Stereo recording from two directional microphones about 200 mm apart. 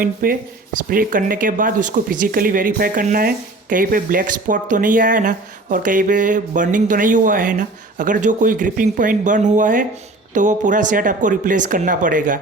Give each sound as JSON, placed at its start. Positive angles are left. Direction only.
{"t": 0.0, "sound": "speech", "side_deg": -45}